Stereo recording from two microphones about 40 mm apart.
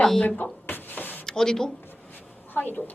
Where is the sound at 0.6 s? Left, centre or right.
Left.